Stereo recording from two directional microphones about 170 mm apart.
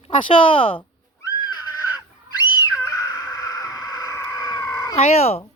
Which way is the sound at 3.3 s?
20° left (ahead or behind).